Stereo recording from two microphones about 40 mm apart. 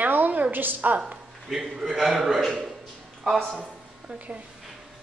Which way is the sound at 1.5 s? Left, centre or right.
Centre.